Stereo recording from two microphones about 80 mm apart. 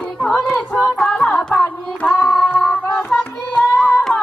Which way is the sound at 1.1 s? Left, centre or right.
Centre.